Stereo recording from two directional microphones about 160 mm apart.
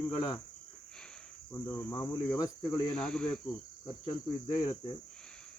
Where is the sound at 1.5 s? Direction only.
10° left (ahead or behind).